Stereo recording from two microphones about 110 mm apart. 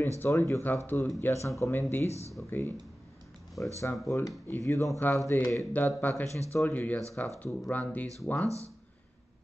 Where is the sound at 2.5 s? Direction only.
20° left (ahead or behind).